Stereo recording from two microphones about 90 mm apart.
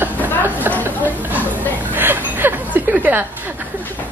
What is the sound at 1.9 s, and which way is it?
Chuckle, 20° right (ahead or behind).